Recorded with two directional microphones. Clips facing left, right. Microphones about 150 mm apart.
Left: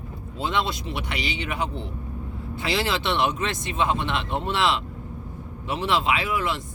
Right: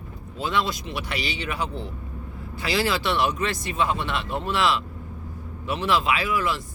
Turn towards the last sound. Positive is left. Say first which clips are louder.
# right 1 dB
turn(degrees=20)  # may be behind; listen again after turning